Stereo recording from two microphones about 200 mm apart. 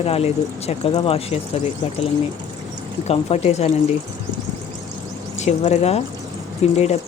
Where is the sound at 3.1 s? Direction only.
35° left (ahead or behind).